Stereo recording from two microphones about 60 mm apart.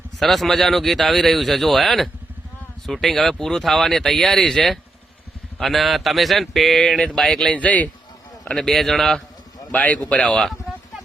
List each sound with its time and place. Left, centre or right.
0.2 s speech: centre; by 7.9 s left
8.4 s speech: centre
9.7 s a man's voice: left
10.7 s a sound: centre